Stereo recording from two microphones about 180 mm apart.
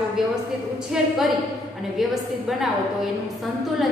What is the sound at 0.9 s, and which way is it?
A woman's voice, 5° right (ahead or behind).